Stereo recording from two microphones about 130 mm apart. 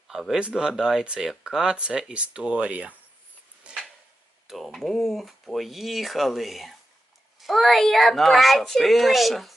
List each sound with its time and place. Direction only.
0.1 s speech: centre (ahead or behind)
3.6 s a sound: 5° right (ahead or behind)
4.4 s speech: centre (ahead or behind)